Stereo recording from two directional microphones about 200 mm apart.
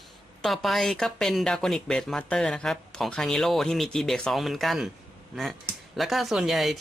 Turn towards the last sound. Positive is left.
turn(degrees=0)  # may be behind; listen again after turning